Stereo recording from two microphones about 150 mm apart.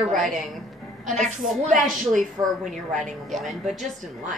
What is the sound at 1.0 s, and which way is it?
Speech, 55° right (ahead or behind).